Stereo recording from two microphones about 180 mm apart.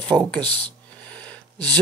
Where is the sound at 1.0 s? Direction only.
5° left (ahead or behind).